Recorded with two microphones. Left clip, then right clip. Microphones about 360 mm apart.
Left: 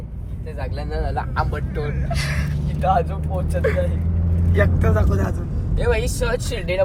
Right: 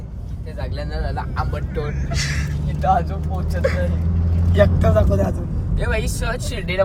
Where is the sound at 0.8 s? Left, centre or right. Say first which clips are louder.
Left 2 dB; left.